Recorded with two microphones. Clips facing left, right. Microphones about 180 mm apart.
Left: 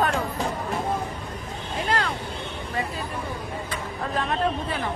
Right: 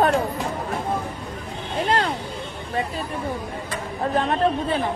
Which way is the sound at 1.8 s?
25° right (ahead or behind).